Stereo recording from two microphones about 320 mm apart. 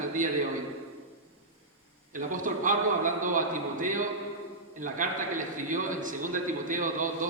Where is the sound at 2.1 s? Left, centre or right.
Right.